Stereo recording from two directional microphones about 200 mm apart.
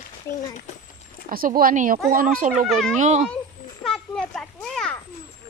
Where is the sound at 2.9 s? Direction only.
35° right (ahead or behind).